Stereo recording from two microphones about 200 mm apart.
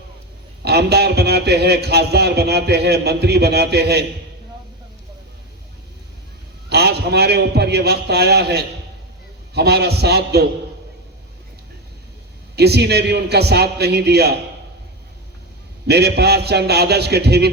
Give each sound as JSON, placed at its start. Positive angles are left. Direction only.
{"t": 0.6, "sound": "a man's voice", "side_deg": -55}
{"t": 6.7, "sound": "a man's voice", "side_deg": -55}
{"t": 12.5, "sound": "a man's voice", "side_deg": -55}
{"t": 15.9, "sound": "a man's voice", "side_deg": -55}